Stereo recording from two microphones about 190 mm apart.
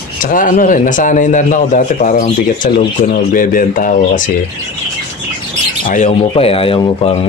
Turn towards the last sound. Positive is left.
turn(degrees=30)  # may be behind; listen again after turning